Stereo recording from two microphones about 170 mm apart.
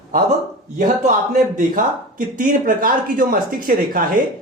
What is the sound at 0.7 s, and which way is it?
A man's voice, 50° right (ahead or behind).